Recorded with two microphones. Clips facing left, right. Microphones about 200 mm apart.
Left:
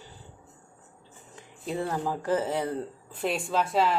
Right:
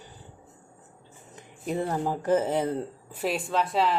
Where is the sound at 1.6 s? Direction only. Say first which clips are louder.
Right 2 dB; 15° right (ahead or behind).